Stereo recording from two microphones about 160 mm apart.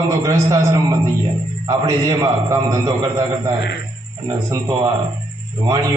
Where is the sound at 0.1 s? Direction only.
20° right (ahead or behind).